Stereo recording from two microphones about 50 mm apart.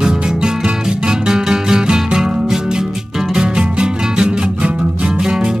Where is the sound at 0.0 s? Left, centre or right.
Centre.